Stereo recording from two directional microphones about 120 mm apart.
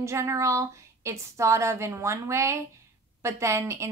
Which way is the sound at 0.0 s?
25° right (ahead or behind).